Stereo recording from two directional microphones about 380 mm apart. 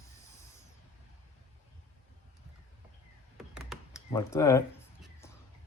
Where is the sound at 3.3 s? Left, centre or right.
Centre.